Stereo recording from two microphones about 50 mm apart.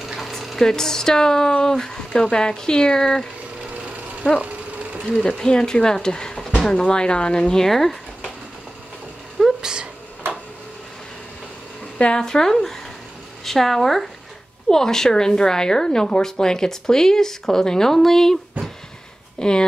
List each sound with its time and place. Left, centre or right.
0.0 s a sound: centre
0.3 s a woman's voice: centre
3.7 s vehicle: right
5.4 s a woman's voice: centre
9.4 s cat: centre
12.0 s a woman's voice: centre